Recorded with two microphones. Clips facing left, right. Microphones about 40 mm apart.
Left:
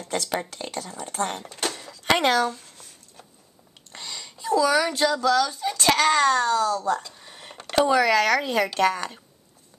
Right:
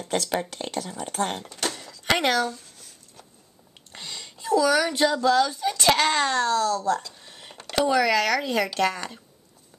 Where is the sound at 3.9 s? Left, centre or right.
Centre.